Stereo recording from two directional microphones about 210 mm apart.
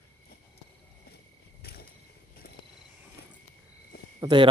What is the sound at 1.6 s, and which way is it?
Mechanisms, 50° left (ahead or behind).